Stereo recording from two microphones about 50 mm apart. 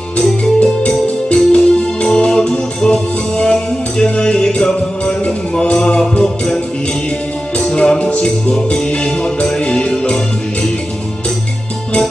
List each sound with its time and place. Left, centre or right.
0.4 s music: left